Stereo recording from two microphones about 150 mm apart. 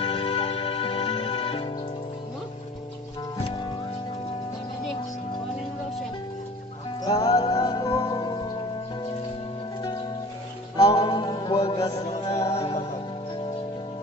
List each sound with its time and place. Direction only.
0.0 s music: 40° left (ahead or behind)
7.1 s music: 25° left (ahead or behind)
10.8 s music: 30° left (ahead or behind)
12.5 s music: 40° left (ahead or behind)